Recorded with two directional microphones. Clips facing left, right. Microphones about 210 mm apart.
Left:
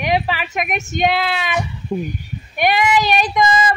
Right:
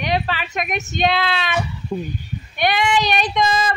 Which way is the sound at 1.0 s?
10° left (ahead or behind).